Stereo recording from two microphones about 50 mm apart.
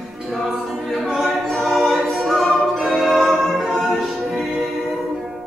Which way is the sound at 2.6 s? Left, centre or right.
Centre.